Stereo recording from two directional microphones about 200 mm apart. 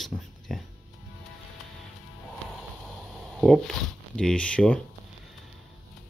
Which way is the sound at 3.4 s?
Centre (ahead or behind).